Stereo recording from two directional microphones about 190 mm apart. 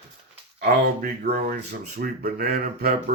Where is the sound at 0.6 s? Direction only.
55° right (ahead or behind).